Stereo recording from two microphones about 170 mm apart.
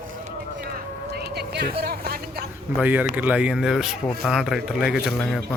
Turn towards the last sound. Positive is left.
turn(degrees=-5)  # may be behind; listen again after turning